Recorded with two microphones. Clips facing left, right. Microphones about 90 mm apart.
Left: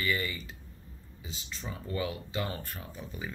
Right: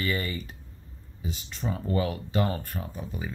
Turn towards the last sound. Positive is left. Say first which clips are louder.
# right 5 dB
turn(degrees=-35)  # may be behind; listen again after turning